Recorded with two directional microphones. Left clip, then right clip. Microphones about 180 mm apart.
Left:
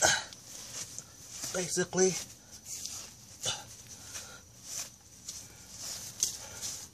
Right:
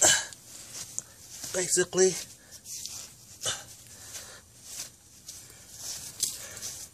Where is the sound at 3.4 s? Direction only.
45° right (ahead or behind).